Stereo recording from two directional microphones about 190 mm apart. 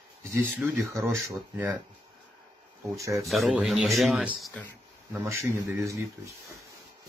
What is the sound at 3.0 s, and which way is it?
Speech, 15° right (ahead or behind).